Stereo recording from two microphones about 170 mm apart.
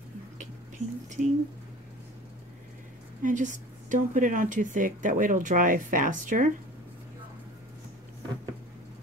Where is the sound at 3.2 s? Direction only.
50° right (ahead or behind).